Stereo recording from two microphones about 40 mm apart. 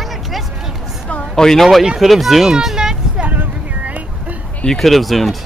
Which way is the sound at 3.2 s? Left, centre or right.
Right.